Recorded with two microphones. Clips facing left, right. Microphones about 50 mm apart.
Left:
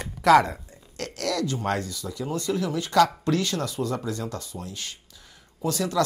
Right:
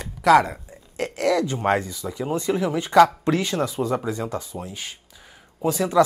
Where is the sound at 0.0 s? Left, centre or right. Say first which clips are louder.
Right 1 dB; centre.